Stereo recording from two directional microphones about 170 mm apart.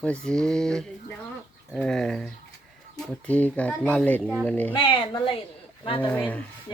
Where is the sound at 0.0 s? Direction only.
5° left (ahead or behind).